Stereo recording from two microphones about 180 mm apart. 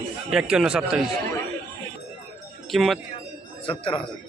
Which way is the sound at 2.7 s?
Centre (ahead or behind).